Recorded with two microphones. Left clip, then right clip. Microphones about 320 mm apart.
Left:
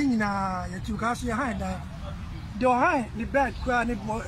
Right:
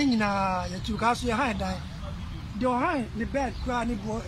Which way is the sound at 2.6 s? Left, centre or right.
Left.